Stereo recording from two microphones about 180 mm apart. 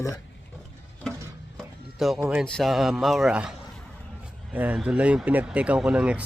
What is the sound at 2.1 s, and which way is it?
Speech, 15° right (ahead or behind).